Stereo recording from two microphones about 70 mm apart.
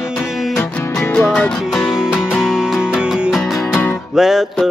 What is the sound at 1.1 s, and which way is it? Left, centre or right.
Music, centre.